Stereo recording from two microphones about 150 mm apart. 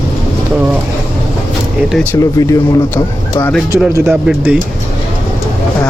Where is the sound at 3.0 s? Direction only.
20° left (ahead or behind).